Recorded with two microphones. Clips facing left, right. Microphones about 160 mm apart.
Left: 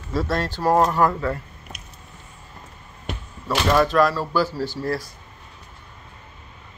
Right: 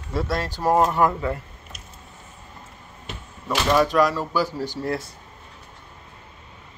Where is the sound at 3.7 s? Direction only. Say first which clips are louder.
Left 1 dB; 10° right (ahead or behind).